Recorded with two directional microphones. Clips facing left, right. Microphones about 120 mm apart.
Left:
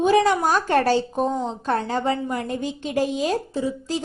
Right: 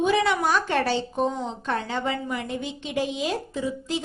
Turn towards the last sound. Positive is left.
turn(degrees=35)  # may be behind; listen again after turning